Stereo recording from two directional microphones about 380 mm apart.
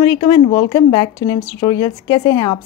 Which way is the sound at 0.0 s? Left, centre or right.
Centre.